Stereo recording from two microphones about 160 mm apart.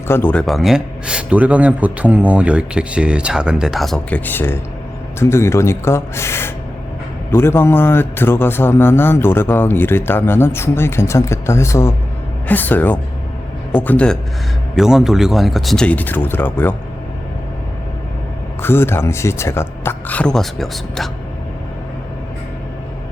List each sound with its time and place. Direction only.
0.1 s a man's voice: 10° left (ahead or behind)
14.8 s speech: 5° right (ahead or behind); by 16.7 s 10° left (ahead or behind)
18.6 s a man's voice: 15° left (ahead or behind)